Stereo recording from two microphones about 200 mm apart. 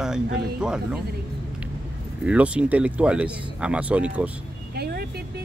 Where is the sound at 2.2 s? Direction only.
5° right (ahead or behind).